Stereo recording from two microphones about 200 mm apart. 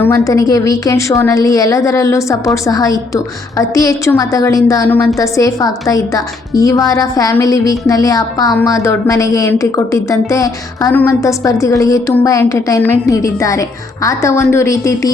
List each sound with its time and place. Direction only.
0.0 s a woman's voice: 15° left (ahead or behind)